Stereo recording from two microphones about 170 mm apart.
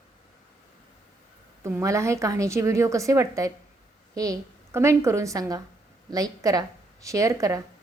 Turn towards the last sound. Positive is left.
turn(degrees=-20)  # may be behind; listen again after turning